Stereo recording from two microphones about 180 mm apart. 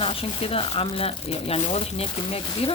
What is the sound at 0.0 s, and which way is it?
Speech, 30° left (ahead or behind).